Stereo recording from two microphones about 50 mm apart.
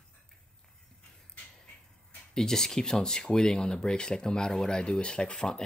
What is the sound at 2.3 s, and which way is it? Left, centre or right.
Speech, centre.